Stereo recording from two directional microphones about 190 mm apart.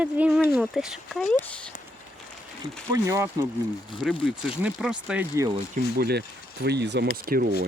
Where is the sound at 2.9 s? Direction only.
15° right (ahead or behind).